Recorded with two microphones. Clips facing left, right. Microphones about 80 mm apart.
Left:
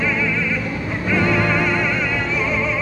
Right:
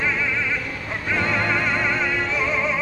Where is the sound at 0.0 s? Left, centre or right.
Centre.